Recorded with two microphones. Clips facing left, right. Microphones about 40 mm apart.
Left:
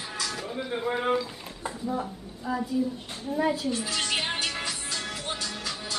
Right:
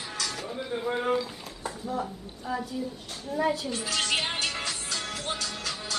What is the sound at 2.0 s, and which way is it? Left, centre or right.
Speech, centre.